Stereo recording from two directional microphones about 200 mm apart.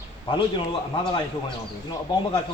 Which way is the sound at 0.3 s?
25° left (ahead or behind).